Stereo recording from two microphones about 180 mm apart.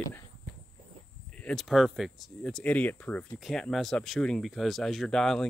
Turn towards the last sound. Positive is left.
turn(degrees=5)  # may be behind; listen again after turning